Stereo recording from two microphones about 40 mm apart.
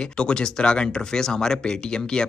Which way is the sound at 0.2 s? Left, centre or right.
Left.